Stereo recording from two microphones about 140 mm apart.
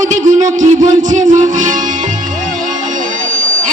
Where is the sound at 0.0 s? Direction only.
60° right (ahead or behind).